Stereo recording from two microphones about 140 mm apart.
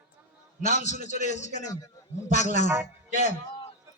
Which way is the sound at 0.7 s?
55° left (ahead or behind).